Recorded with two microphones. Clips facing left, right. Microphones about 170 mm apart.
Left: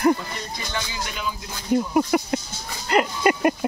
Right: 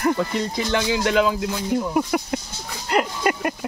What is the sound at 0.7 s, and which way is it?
Speech, 90° right.